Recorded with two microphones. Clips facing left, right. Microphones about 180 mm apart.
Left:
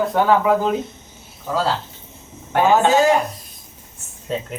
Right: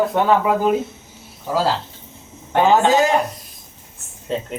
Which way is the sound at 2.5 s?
15° right (ahead or behind).